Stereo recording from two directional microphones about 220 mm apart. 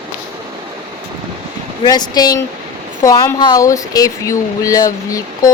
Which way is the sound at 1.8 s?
20° left (ahead or behind).